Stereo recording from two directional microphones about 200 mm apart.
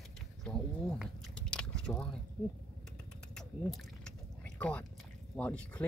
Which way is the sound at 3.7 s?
5° left (ahead or behind).